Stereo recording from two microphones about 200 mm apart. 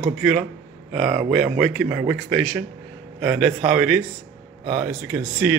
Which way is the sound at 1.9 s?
10° right (ahead or behind).